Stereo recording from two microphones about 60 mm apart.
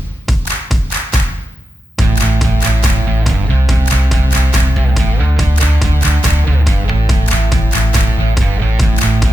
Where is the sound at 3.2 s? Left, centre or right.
Centre.